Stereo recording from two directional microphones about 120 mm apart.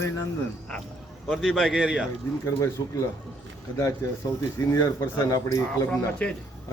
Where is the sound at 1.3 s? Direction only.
Centre (ahead or behind).